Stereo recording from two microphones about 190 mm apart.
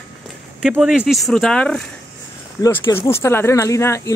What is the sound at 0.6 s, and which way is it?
Speech, 5° right (ahead or behind).